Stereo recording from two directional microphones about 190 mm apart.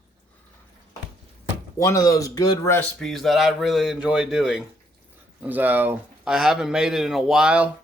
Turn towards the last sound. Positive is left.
turn(degrees=-5)  # may be behind; listen again after turning